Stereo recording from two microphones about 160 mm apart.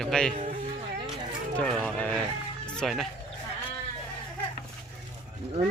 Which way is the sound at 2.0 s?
10° left (ahead or behind).